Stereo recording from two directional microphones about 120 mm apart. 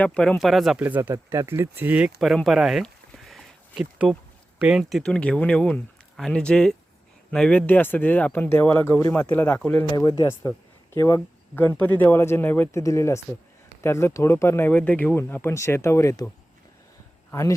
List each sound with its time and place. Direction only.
0.0 s speech: 10° left (ahead or behind)
0.8 s speech: 15° right (ahead or behind)
2.1 s a sound: centre (ahead or behind)
4.6 s speech: centre (ahead or behind)
9.9 s speech: 35° left (ahead or behind)